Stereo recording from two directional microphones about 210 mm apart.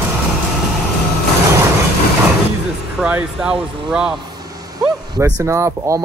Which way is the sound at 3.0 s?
5° right (ahead or behind).